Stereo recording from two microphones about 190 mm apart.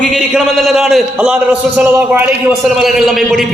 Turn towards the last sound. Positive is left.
turn(degrees=0)  # may be behind; listen again after turning